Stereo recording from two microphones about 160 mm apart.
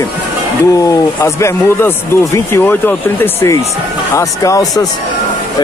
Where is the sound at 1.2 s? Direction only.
15° left (ahead or behind).